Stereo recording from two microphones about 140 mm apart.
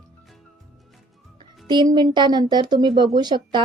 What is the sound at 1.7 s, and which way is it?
Speech, 30° right (ahead or behind).